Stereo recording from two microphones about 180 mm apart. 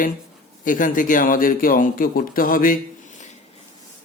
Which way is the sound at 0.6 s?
50° left (ahead or behind).